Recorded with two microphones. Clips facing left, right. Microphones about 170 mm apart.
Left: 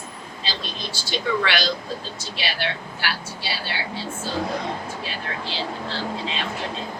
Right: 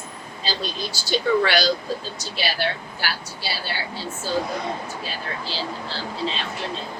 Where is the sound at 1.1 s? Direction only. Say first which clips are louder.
Right 4 dB; 40° right (ahead or behind).